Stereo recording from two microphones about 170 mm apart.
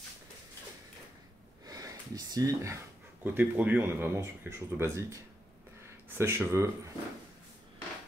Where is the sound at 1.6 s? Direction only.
20° right (ahead or behind).